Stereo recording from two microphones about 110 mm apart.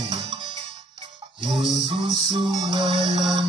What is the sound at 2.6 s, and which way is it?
Music, 50° right (ahead or behind).